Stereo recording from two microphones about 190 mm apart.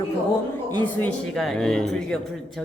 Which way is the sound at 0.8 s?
5° left (ahead or behind).